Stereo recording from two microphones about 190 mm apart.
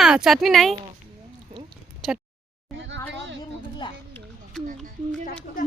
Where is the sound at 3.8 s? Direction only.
25° left (ahead or behind).